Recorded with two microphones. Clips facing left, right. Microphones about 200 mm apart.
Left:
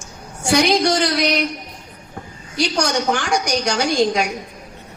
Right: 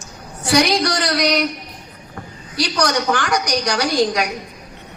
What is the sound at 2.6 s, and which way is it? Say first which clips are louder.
A woman's voice: even; 25° left (ahead or behind).